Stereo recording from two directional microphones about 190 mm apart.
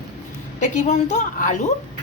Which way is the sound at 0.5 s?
40° left (ahead or behind).